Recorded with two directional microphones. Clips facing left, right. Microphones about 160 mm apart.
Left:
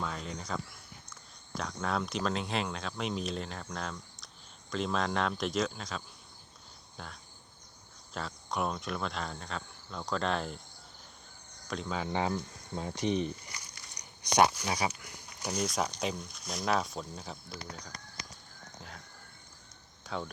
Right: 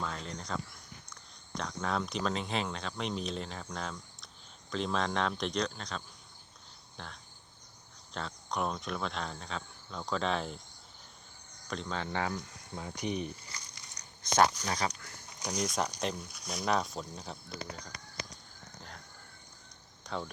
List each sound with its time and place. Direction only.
0.0 s speech: 5° left (ahead or behind)
6.9 s a sound: 5° left (ahead or behind)
8.1 s speech: 5° left (ahead or behind)
11.7 s speech: 5° left (ahead or behind)
12.1 s speech: 25° left (ahead or behind); by 17.3 s centre (ahead or behind)
17.8 s a sound: centre (ahead or behind)
20.1 s speech: centre (ahead or behind)